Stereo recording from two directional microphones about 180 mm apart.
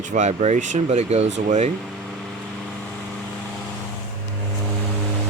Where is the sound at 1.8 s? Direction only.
Centre (ahead or behind).